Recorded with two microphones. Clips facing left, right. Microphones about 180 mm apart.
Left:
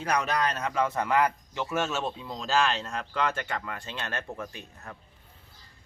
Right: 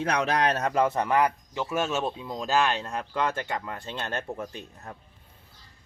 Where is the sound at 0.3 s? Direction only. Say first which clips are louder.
Right 4 dB; 75° right (ahead or behind).